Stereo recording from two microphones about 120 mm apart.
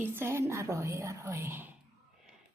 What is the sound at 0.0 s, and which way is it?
A woman's voice, 20° right (ahead or behind).